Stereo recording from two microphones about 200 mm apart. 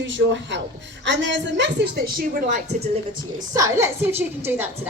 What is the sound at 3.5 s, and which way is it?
A woman's voice, 15° right (ahead or behind).